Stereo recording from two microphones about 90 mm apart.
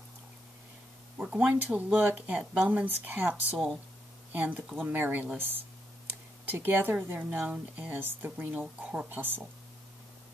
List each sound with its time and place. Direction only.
1.1 s speech: 15° right (ahead or behind)
3.5 s speech: centre (ahead or behind)
4.3 s speech: 20° right (ahead or behind)